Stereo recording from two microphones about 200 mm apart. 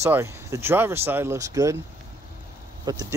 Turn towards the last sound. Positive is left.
turn(degrees=-20)  # may be behind; listen again after turning